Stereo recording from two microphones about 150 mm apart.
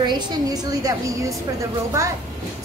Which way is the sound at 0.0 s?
30° right (ahead or behind).